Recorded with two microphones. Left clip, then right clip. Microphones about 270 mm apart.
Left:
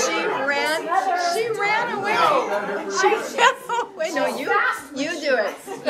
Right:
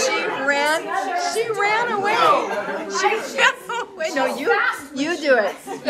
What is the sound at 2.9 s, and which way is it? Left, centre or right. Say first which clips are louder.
Children playing: left 1 dB; centre.